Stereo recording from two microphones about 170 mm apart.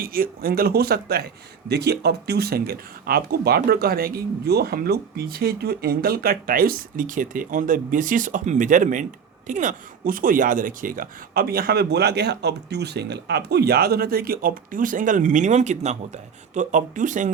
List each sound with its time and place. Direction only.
0.0 s speech: 60° right (ahead or behind)